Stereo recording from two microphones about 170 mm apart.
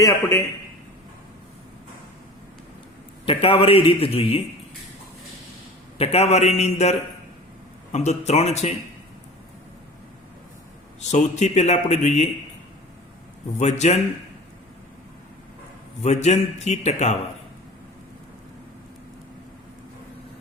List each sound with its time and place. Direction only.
0.0 s a man's voice: 15° left (ahead or behind)
3.2 s speech: 35° left (ahead or behind)
6.0 s speech: 35° left (ahead or behind)
7.9 s speech: 40° left (ahead or behind)
11.1 s a man's voice: 45° left (ahead or behind)
13.6 s a man's voice: 45° left (ahead or behind)
16.0 s speech: 40° left (ahead or behind)